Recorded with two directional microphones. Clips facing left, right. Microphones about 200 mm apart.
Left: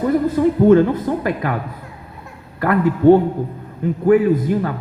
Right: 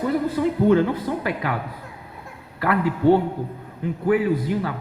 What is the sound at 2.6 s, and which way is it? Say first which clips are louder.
Speech: left 5 dB; 45° left (ahead or behind).